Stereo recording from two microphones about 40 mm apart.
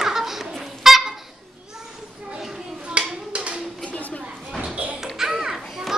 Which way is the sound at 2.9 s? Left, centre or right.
Right.